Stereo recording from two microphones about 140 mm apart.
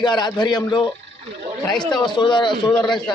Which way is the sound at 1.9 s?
30° left (ahead or behind).